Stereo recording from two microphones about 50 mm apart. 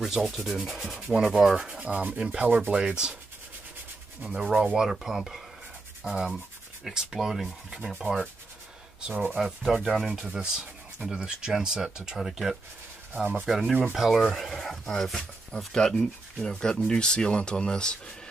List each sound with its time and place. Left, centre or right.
0.0 s speech: centre; by 2.0 s right
2.1 s rub: right
2.8 s speech: centre
4.2 s speech: centre
6.0 s rub: right
6.8 s speech: centre
8.0 s rub: centre
9.4 s speech: centre
10.3 s speech: centre
13.1 s rub: right
13.5 s speech: centre